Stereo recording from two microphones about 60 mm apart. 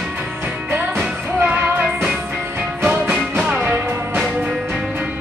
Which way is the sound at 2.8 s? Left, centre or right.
Right.